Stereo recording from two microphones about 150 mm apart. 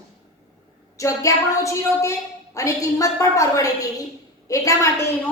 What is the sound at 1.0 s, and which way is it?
A woman's voice, 20° left (ahead or behind).